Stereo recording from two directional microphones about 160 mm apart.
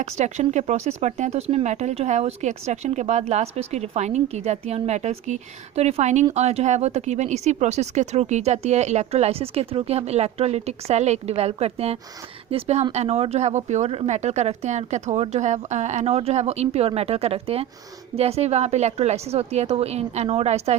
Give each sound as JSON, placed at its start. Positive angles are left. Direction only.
{"t": 0.0, "sound": "a woman's voice", "side_deg": -45}